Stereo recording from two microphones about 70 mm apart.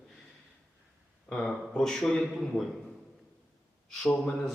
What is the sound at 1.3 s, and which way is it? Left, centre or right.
A man's voice, centre.